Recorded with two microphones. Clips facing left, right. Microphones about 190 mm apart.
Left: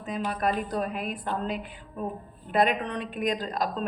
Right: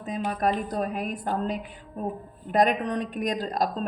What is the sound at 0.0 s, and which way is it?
A woman's voice, 40° right (ahead or behind).